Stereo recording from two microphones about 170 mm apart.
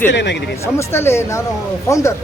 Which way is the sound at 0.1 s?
90° left.